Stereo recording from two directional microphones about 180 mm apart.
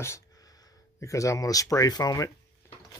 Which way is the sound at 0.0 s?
15° left (ahead or behind).